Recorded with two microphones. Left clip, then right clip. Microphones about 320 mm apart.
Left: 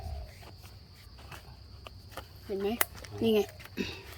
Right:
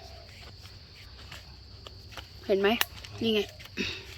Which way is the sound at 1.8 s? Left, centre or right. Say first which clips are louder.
Right 1 dB; left.